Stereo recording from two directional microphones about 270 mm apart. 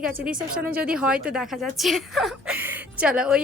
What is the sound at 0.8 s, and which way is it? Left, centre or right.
Speech, centre.